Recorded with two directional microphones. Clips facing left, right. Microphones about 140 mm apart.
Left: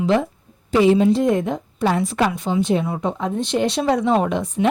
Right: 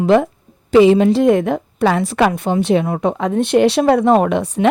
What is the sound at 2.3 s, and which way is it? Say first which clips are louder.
A woman's voice: right 4 dB; 55° right (ahead or behind).